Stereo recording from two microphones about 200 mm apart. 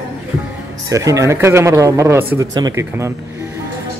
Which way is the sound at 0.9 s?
15° right (ahead or behind).